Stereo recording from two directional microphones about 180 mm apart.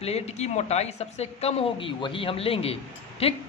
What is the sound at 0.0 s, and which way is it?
A woman's voice, 35° left (ahead or behind).